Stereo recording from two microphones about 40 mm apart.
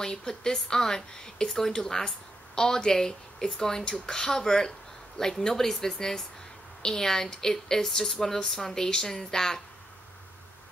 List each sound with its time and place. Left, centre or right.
0.0 s a woman's voice: centre